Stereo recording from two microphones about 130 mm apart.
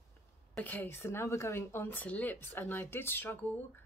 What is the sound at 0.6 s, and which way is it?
Speech, 15° left (ahead or behind).